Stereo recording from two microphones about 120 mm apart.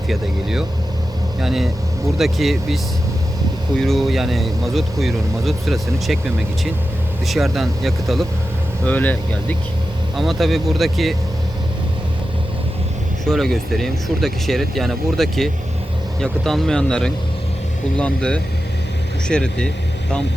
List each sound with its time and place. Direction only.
0.1 s speech: 5° right (ahead or behind)
3.8 s speech: centre (ahead or behind)
7.3 s speech: centre (ahead or behind)
8.8 s speech: 15° left (ahead or behind)
10.2 s speech: centre (ahead or behind)
13.2 s speech: 5° left (ahead or behind)